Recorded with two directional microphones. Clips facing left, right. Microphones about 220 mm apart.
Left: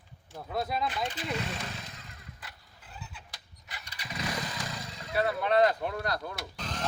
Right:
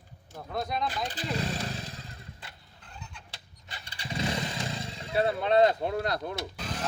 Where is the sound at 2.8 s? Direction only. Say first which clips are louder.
Even; 5° left (ahead or behind).